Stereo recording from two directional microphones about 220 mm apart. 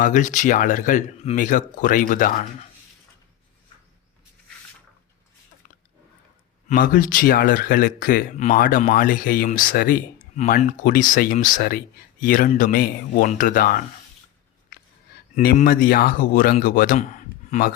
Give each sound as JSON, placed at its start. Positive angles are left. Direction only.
{"t": 0.0, "sound": "speech", "side_deg": 35}
{"t": 6.7, "sound": "speech", "side_deg": 40}
{"t": 14.7, "sound": "a sound", "side_deg": 40}
{"t": 15.5, "sound": "speech", "side_deg": 40}